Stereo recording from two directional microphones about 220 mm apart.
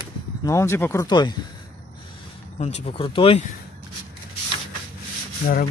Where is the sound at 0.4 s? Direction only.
15° left (ahead or behind).